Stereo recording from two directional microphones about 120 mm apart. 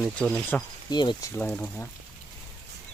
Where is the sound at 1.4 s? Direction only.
15° left (ahead or behind).